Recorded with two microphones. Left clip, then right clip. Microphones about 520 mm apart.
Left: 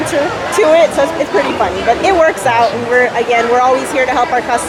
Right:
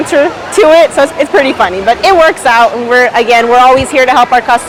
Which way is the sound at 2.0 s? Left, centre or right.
Right.